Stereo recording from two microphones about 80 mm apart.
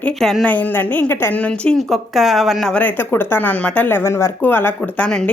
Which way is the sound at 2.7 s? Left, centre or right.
Left.